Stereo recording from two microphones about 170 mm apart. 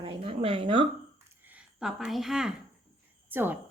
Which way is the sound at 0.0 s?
30° right (ahead or behind).